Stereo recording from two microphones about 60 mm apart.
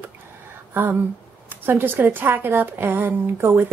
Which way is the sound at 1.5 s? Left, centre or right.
Right.